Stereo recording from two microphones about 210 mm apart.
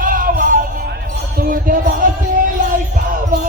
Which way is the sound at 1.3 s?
40° right (ahead or behind).